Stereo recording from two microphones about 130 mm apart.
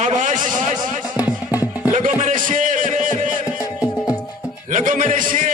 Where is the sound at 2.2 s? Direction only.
90° right.